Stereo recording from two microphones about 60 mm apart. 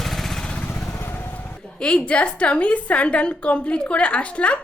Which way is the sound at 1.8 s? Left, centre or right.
Centre.